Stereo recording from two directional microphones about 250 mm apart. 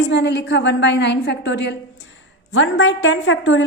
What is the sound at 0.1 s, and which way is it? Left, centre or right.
A woman's voice, left.